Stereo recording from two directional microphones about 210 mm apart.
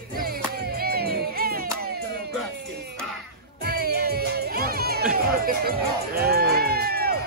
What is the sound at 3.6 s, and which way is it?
Music, 45° right (ahead or behind).